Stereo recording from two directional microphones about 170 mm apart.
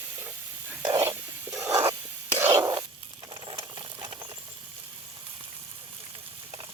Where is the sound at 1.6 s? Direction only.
15° right (ahead or behind).